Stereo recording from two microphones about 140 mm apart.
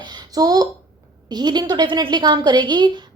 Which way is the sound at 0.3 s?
25° right (ahead or behind).